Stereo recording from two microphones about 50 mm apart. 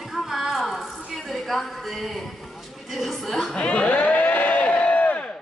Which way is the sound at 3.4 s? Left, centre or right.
Centre.